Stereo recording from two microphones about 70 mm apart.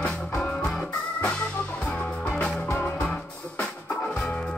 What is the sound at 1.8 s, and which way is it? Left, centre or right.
Music, centre.